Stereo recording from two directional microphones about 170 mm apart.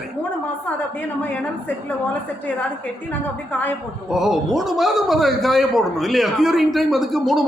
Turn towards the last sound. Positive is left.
turn(degrees=0)  # may be behind; listen again after turning